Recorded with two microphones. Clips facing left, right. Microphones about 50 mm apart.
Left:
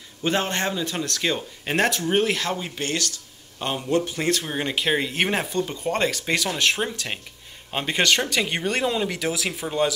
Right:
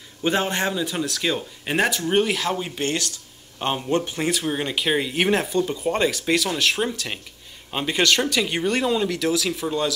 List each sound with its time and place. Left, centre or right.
0.2 s speech: centre
2.8 s a man's voice: centre
4.2 s speech: centre